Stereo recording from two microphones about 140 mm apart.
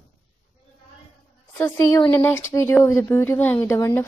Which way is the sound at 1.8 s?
25° left (ahead or behind).